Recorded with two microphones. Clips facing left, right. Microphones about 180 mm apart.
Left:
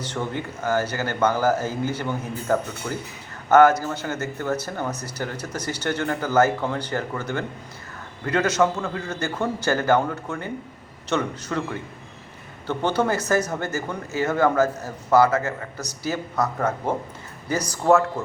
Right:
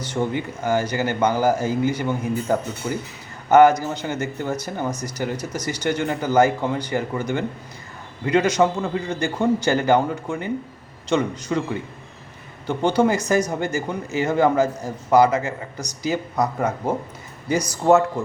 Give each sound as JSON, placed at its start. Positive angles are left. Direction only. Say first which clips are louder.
{"t": 0.2, "sound": "a man's voice", "louder": "right 5 dB", "side_deg": -15}